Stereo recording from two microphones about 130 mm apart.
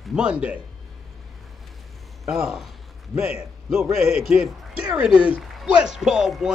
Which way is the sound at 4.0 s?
55° left (ahead or behind).